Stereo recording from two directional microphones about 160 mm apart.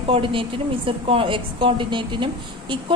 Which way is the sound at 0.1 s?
35° right (ahead or behind).